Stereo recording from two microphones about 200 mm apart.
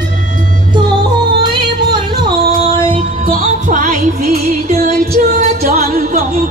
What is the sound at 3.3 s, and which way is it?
Music, 40° right (ahead or behind).